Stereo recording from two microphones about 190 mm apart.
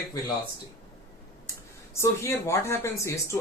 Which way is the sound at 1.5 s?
15° left (ahead or behind).